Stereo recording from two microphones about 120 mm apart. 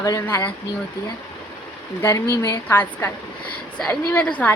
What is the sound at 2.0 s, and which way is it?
A woman's voice, 25° left (ahead or behind).